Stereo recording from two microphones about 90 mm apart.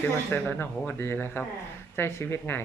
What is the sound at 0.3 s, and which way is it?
Speech, 25° left (ahead or behind).